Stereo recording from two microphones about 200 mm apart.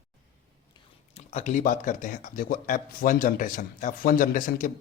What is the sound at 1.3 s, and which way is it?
Speech, 40° left (ahead or behind).